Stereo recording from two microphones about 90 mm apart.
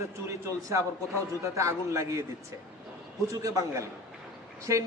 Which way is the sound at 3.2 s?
35° right (ahead or behind).